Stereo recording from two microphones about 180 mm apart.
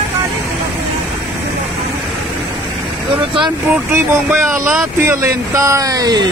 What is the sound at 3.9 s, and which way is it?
Speech, 15° right (ahead or behind).